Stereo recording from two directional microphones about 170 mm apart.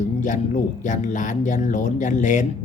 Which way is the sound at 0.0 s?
45° left (ahead or behind).